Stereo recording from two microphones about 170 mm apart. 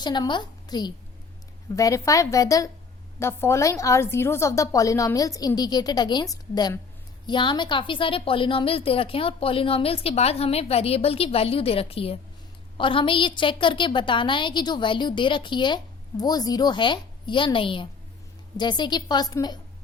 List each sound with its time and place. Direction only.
0.0 s a woman's voice: 25° left (ahead or behind)